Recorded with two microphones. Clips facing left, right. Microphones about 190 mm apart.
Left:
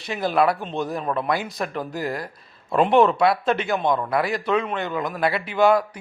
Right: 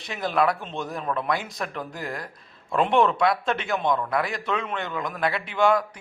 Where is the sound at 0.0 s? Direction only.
5° left (ahead or behind).